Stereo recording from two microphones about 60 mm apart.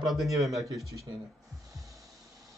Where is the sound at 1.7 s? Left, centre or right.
Right.